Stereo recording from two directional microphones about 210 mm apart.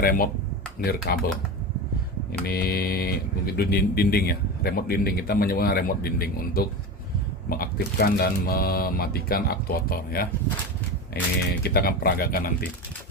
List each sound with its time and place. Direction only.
0.0 s speech: 45° left (ahead or behind)
2.4 s speech: 45° left (ahead or behind)